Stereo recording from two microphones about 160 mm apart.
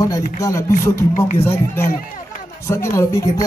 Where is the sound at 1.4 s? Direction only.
15° left (ahead or behind).